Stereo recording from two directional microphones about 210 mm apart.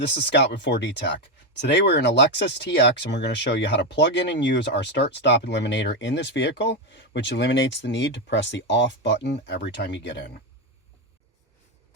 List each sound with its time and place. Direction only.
0.1 s speech: 55° left (ahead or behind)